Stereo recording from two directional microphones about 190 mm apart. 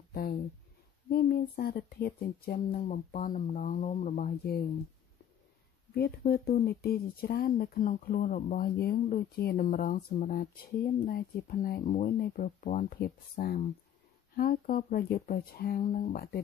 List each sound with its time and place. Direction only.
0.1 s speech: 55° left (ahead or behind)
5.9 s speech: 55° left (ahead or behind)
8.7 s speech: 55° left (ahead or behind)